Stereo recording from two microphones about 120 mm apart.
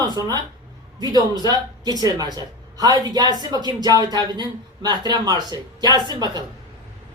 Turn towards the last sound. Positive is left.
turn(degrees=-35)  # may be behind; listen again after turning